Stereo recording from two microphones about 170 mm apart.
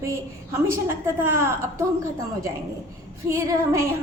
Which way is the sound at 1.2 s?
15° right (ahead or behind).